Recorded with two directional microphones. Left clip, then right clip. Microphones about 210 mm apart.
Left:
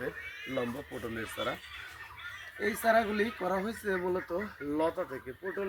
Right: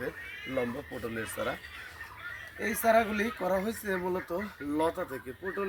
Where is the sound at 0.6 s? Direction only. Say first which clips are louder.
Right 3 dB; 25° right (ahead or behind).